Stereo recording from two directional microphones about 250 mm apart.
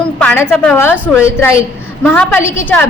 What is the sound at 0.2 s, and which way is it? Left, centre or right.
A woman's voice, centre.